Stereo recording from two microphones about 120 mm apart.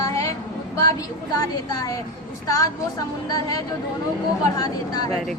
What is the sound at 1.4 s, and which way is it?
A woman's voice, 30° left (ahead or behind).